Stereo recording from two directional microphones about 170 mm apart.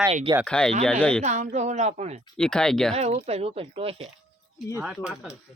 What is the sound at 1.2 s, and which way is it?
A woman's voice, 45° right (ahead or behind).